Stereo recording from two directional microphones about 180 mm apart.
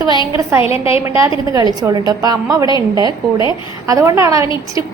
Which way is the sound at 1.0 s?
15° right (ahead or behind).